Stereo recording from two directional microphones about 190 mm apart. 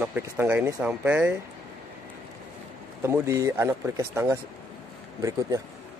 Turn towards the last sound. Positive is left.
turn(degrees=-20)  # may be behind; listen again after turning